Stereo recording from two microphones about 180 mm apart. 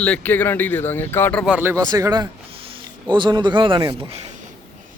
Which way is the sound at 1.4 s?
10° right (ahead or behind).